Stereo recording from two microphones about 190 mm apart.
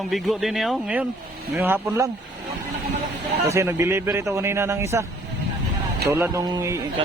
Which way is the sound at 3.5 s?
15° right (ahead or behind).